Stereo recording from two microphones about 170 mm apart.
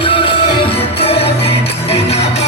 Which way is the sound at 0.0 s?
30° left (ahead or behind).